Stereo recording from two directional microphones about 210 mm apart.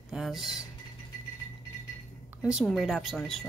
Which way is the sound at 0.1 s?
Centre (ahead or behind).